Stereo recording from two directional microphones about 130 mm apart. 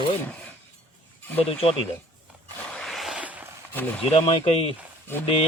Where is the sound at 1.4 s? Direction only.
50° left (ahead or behind).